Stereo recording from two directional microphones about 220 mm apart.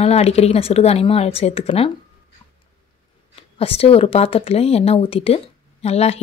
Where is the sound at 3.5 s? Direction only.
25° left (ahead or behind).